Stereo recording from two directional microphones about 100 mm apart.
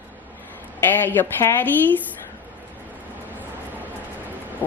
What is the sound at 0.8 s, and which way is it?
Speech, 20° left (ahead or behind).